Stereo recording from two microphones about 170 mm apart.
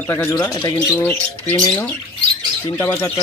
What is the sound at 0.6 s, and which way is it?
Speech, 20° left (ahead or behind).